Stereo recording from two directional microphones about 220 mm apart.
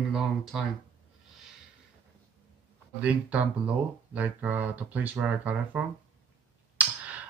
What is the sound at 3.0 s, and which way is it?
Speech, 5° right (ahead or behind).